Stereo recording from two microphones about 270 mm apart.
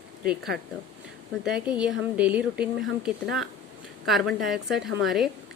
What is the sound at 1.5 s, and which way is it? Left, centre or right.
A woman's voice, centre.